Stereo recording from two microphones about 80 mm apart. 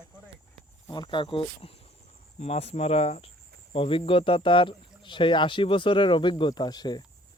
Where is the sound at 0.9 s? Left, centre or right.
Left.